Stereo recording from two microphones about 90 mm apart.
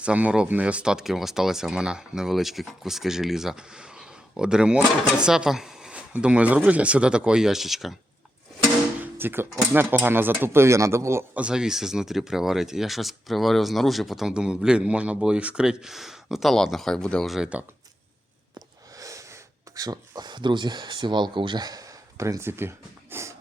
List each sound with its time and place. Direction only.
0.0 s speech: 15° right (ahead or behind)
9.0 s music: 25° right (ahead or behind)
9.7 s speech: 20° right (ahead or behind)
11.3 s speech: 10° right (ahead or behind); by 17.3 s 10° left (ahead or behind)
17.3 s speech: 10° right (ahead or behind)
18.9 s speech: 35° right (ahead or behind)